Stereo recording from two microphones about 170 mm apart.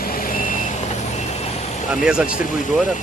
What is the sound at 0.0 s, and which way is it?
Vehicle, 55° left (ahead or behind).